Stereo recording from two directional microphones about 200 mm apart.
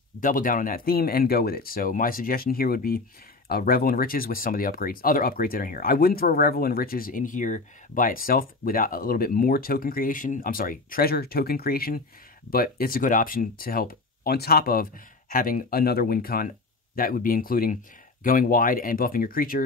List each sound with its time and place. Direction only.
0.2 s speech: 45° left (ahead or behind)